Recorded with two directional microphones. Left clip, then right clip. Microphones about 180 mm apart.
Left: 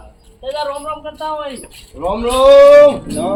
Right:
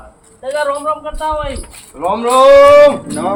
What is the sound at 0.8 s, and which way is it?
Speech, 25° left (ahead or behind).